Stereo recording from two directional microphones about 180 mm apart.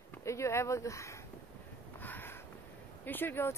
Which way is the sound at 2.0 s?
10° left (ahead or behind).